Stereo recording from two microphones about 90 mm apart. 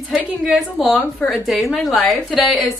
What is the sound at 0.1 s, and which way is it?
A woman's voice, centre (ahead or behind).